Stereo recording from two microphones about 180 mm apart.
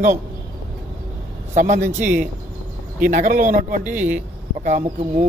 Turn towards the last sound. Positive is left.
turn(degrees=-40)  # may be behind; listen again after turning